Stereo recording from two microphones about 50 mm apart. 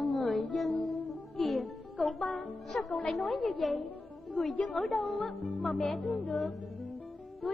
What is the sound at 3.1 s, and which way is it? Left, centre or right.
Music, centre.